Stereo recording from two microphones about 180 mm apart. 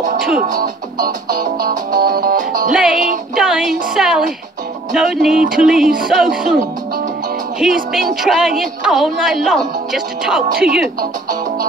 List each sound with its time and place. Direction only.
0.4 s music: 50° right (ahead or behind)
2.7 s a woman's voice: 5° right (ahead or behind)
7.9 s a woman's voice: centre (ahead or behind)